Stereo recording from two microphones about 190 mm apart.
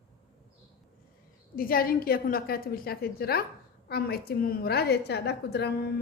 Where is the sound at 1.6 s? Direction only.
50° left (ahead or behind).